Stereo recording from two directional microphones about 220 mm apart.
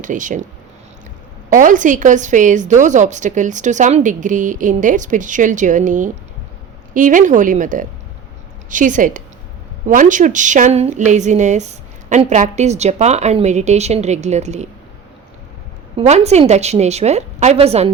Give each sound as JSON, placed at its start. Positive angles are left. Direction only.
{"t": 0.0, "sound": "a woman's voice", "side_deg": -35}
{"t": 1.5, "sound": "a woman's voice", "side_deg": -35}
{"t": 16.0, "sound": "a woman's voice", "side_deg": -30}